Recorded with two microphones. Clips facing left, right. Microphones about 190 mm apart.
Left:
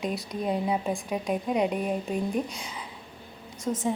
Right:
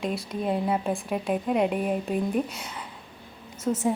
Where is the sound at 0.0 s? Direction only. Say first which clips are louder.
Right 1 dB; centre (ahead or behind).